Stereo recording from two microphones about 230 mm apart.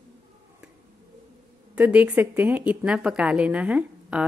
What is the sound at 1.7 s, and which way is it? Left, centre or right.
Speech, centre.